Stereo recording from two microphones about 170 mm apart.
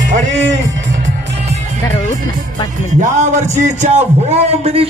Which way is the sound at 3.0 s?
45° right (ahead or behind).